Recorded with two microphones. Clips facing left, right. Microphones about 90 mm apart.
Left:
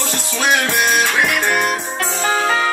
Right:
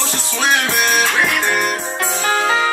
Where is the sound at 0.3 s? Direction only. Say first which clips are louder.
Left 1 dB; 5° left (ahead or behind).